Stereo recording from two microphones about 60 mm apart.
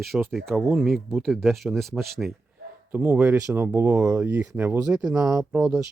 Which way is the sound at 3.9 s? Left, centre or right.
Right.